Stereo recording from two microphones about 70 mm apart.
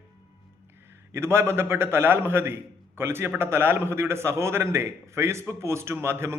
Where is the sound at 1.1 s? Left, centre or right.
Right.